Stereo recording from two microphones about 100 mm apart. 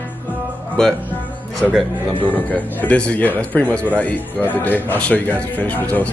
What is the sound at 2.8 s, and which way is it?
Speech, 15° left (ahead or behind).